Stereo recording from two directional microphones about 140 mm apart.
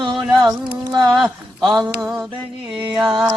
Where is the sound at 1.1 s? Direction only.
Centre (ahead or behind).